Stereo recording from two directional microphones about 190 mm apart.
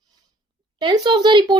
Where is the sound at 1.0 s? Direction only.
25° right (ahead or behind).